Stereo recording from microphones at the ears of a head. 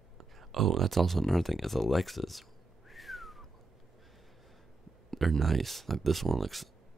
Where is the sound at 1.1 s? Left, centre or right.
Centre.